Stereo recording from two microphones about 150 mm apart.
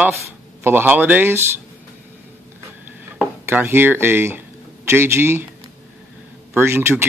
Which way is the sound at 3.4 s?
15° right (ahead or behind).